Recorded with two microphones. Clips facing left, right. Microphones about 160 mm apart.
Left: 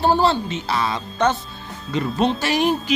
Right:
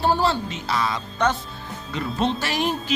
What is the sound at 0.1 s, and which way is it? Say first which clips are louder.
Speech: left 3 dB; 25° left (ahead or behind).